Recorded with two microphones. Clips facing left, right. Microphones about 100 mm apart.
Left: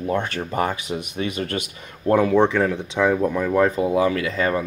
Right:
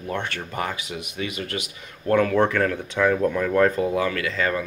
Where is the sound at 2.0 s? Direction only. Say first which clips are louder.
Left 3 dB; 20° left (ahead or behind).